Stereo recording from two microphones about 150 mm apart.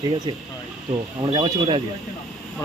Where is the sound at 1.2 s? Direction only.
30° right (ahead or behind).